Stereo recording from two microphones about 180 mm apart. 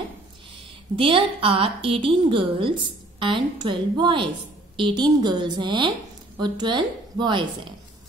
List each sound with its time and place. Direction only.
0.9 s a woman's voice: 30° right (ahead or behind)